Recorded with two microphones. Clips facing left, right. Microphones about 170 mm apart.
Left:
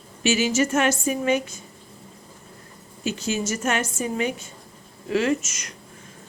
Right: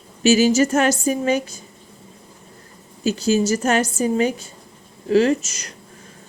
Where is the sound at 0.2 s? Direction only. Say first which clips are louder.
Right 6 dB; 40° right (ahead or behind).